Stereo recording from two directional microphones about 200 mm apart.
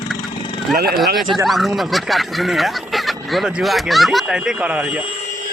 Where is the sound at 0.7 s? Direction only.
50° right (ahead or behind).